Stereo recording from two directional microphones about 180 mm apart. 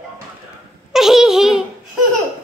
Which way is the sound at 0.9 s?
Centre (ahead or behind).